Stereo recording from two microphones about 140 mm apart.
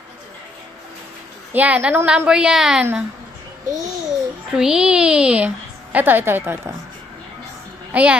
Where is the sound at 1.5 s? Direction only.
10° right (ahead or behind).